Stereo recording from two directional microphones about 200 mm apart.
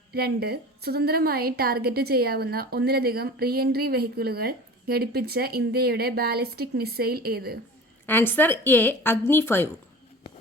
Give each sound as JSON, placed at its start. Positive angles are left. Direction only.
{"t": 0.1, "sound": "a woman's voice", "side_deg": -50}
{"t": 8.0, "sound": "a woman's voice", "side_deg": 10}